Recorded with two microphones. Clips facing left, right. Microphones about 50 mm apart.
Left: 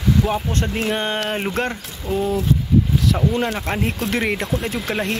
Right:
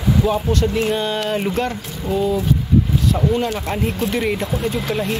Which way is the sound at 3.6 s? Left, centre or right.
Left.